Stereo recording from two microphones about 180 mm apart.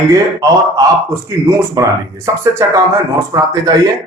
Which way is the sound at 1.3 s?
15° right (ahead or behind).